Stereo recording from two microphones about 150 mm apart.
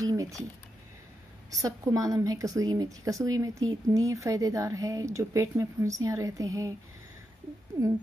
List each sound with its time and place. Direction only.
0.0 s speech: 25° right (ahead or behind)
1.5 s a woman's voice: 25° right (ahead or behind)